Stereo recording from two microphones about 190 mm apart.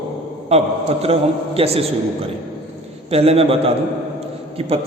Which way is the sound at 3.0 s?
30° right (ahead or behind).